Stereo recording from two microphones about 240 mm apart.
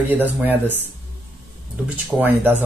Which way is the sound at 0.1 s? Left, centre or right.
Centre.